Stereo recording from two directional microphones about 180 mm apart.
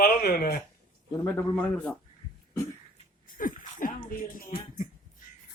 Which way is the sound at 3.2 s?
50° left (ahead or behind).